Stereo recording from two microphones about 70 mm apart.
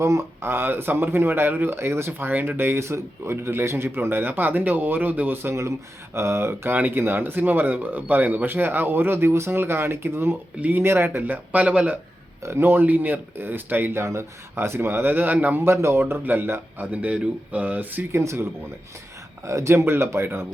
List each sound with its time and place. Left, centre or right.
0.0 s speech: right
6.7 s speech: right
12.5 s speech: right
14.0 s speech: right
15.6 s speech: right
18.1 s speech: right
19.5 s speech: right